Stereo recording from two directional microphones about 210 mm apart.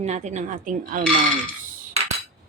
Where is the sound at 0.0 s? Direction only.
35° right (ahead or behind).